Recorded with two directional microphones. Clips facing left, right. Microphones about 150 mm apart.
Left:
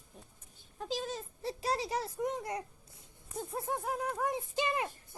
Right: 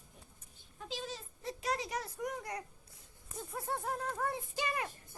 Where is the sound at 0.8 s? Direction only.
40° left (ahead or behind).